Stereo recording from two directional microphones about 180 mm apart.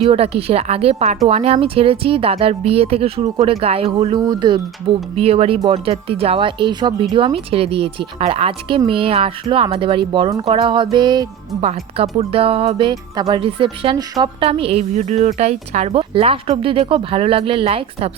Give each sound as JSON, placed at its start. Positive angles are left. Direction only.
{"t": 0.0, "sound": "speech", "side_deg": -35}
{"t": 11.6, "sound": "speech", "side_deg": -35}
{"t": 12.9, "sound": "speech", "side_deg": -20}